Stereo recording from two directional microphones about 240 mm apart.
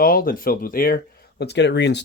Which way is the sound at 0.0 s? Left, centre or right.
Left.